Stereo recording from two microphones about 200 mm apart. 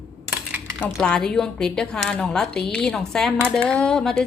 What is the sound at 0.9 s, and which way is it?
A woman's voice, 5° left (ahead or behind).